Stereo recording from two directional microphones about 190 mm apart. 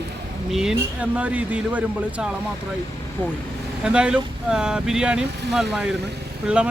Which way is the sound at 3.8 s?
5° right (ahead or behind).